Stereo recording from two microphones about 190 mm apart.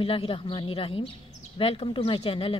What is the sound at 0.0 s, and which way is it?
Speech, 30° left (ahead or behind).